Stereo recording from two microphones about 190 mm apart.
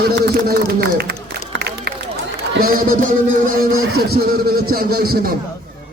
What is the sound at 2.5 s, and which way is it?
Speech, 50° right (ahead or behind).